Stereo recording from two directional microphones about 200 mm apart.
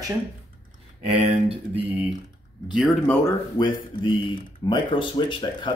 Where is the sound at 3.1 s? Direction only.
15° left (ahead or behind).